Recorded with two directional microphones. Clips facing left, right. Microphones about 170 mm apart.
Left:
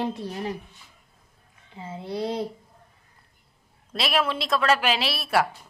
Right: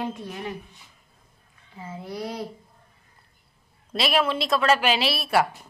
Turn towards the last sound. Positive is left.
turn(degrees=0)  # may be behind; listen again after turning